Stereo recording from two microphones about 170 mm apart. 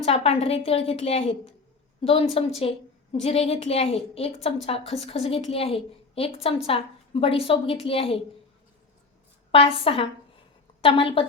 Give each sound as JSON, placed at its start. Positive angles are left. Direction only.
{"t": 0.0, "sound": "a woman's voice", "side_deg": 35}
{"t": 9.5, "sound": "a woman's voice", "side_deg": 35}